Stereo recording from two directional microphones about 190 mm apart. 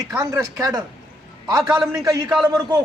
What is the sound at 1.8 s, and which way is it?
A man's voice, 20° right (ahead or behind).